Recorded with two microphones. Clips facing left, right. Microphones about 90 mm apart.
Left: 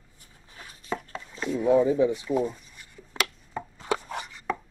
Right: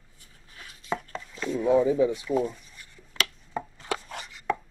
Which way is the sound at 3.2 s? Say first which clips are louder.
Left 2 dB; 30° left (ahead or behind).